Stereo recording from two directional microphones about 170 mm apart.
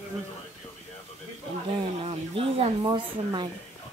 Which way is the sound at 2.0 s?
35° right (ahead or behind).